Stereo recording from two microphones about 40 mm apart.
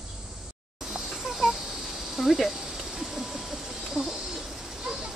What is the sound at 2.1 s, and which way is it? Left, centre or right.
Speech, centre.